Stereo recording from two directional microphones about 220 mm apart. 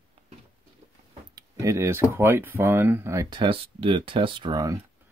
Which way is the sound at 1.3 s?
15° right (ahead or behind).